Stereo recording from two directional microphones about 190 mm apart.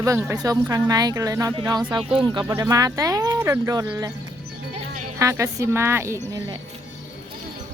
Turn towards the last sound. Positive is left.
turn(degrees=-15)  # may be behind; listen again after turning